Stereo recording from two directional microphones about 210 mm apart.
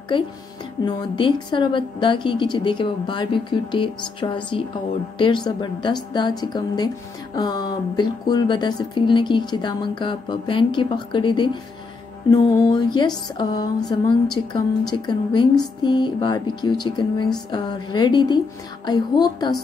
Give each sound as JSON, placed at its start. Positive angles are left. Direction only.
{"t": 0.1, "sound": "speech", "side_deg": 25}